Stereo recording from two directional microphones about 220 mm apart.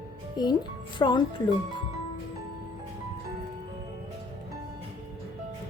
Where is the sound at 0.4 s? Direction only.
20° left (ahead or behind).